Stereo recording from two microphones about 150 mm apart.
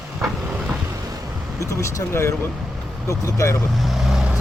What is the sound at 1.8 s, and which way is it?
Speech, 20° left (ahead or behind).